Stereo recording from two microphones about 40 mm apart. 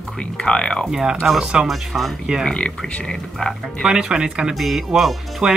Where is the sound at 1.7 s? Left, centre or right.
Centre.